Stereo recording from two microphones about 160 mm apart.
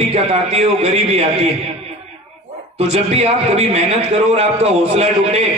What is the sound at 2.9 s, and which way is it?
A man's voice, 40° right (ahead or behind).